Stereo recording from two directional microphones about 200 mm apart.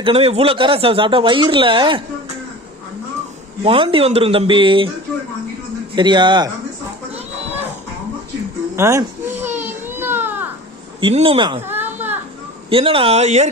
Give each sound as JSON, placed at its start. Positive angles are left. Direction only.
{"t": 0.0, "sound": "speech", "side_deg": -30}
{"t": 3.6, "sound": "speech", "side_deg": -25}
{"t": 5.9, "sound": "speech", "side_deg": -25}
{"t": 8.7, "sound": "baby cry", "side_deg": -15}
{"t": 11.0, "sound": "speech", "side_deg": -25}
{"t": 11.7, "sound": "whimper", "side_deg": -10}
{"t": 12.6, "sound": "speech", "side_deg": -25}